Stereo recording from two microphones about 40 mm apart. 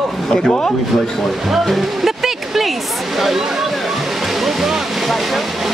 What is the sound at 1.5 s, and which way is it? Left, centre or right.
Music, centre.